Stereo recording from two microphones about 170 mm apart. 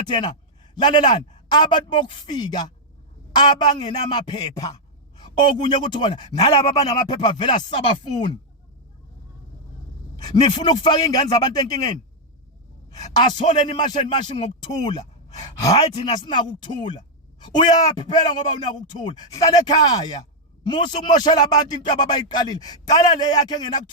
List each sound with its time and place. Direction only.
0.1 s speech: 30° left (ahead or behind)
10.2 s speech: 25° left (ahead or behind)